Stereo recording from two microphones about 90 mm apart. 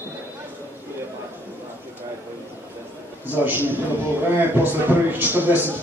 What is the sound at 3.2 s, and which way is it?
A man's voice, 20° right (ahead or behind).